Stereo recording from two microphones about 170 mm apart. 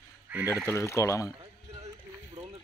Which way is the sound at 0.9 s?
15° left (ahead or behind).